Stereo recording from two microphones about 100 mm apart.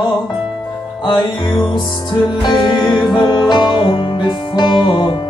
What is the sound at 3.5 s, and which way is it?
Music, 50° left (ahead or behind).